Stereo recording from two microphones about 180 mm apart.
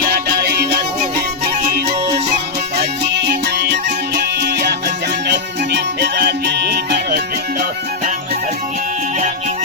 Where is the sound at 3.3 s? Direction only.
70° right (ahead or behind); by 8.1 s 50° right (ahead or behind).